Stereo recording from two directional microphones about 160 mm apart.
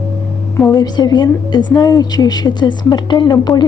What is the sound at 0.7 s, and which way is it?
A woman's voice, 25° left (ahead or behind).